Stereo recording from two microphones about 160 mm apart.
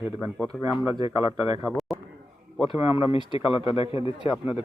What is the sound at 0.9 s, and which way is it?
Speech, 25° right (ahead or behind).